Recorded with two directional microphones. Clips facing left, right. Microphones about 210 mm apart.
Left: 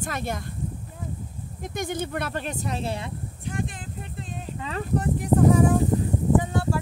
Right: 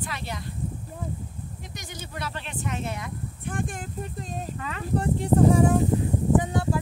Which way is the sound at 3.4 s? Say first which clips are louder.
Even; 50° right (ahead or behind).